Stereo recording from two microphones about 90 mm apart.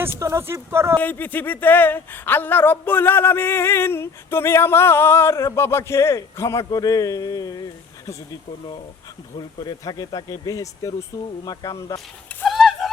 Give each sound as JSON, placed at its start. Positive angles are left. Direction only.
{"t": 0.2, "sound": "speech", "side_deg": -30}
{"t": 0.9, "sound": "speech", "side_deg": 20}
{"t": 12.5, "sound": "a sound", "side_deg": 0}